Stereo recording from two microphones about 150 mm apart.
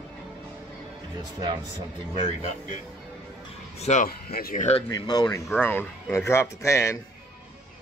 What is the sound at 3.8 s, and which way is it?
Speech, 50° left (ahead or behind).